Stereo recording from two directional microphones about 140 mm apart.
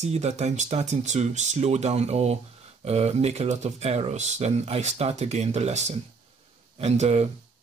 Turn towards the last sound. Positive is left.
turn(degrees=-50)  # may be behind; listen again after turning